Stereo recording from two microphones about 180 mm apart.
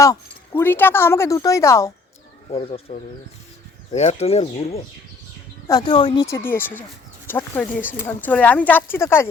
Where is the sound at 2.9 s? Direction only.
40° left (ahead or behind).